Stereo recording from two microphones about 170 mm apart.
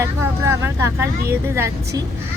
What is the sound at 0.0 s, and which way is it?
Speech, 15° right (ahead or behind).